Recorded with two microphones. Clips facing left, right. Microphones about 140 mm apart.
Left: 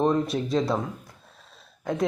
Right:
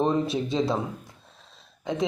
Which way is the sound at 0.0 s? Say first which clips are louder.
Left 1 dB; centre (ahead or behind).